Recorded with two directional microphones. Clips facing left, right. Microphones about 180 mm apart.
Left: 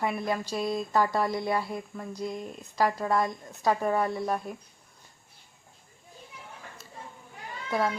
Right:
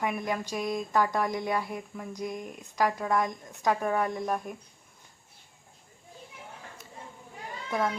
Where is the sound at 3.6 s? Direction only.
5° left (ahead or behind).